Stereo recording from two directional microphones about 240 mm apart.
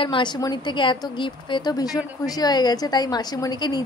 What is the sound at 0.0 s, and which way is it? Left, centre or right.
A woman's voice, centre.